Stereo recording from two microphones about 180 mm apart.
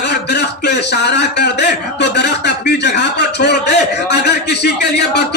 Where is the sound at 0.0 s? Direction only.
70° left (ahead or behind).